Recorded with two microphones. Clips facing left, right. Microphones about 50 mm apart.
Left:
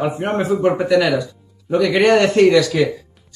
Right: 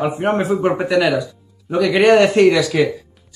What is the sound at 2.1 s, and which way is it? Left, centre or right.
Speech, centre.